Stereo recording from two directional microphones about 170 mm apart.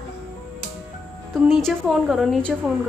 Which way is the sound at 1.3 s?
Centre (ahead or behind).